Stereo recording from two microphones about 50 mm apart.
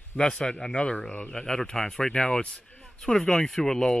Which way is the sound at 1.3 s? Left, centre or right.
Centre.